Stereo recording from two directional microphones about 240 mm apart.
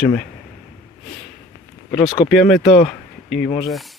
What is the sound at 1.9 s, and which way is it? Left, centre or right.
Speech, left.